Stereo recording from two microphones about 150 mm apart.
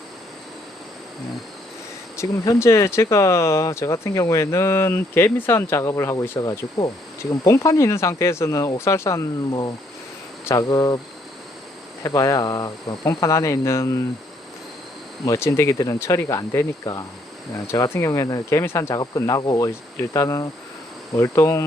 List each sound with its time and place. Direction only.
2.1 s speech: 20° left (ahead or behind)
12.0 s speech: 25° left (ahead or behind)
15.3 s speech: 20° left (ahead or behind)